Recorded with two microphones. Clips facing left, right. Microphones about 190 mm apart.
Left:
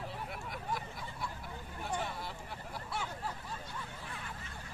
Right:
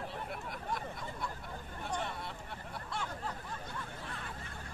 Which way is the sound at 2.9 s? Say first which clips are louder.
Even; 5° left (ahead or behind).